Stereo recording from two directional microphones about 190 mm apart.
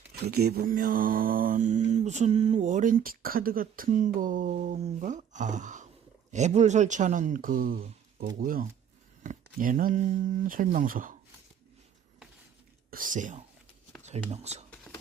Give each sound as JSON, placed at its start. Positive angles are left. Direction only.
{"t": 0.1, "sound": "mantra", "side_deg": -55}
{"t": 3.8, "sound": "speech", "side_deg": -40}
{"t": 8.4, "sound": "mantra", "side_deg": -45}
{"t": 12.9, "sound": "mantra", "side_deg": -45}
{"t": 14.0, "sound": "speech", "side_deg": -35}